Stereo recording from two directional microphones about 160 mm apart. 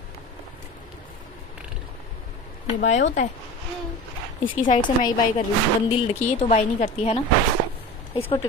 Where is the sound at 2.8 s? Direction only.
50° left (ahead or behind).